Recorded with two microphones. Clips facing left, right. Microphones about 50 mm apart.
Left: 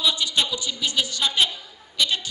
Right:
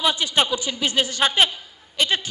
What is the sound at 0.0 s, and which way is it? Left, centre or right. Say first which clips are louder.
A man's voice: right 3 dB; right.